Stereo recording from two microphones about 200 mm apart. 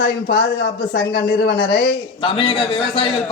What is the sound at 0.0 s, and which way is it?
Speech, 55° left (ahead or behind).